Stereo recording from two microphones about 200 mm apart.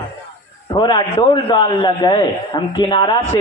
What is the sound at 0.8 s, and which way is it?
A man's voice, 20° left (ahead or behind).